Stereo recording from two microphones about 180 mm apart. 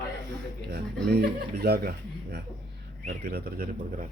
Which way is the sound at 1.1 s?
60° right (ahead or behind).